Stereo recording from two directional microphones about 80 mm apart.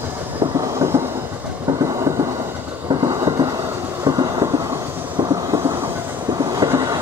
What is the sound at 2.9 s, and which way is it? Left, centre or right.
Train, right.